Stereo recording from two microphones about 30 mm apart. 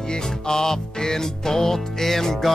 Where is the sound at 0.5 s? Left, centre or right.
Centre.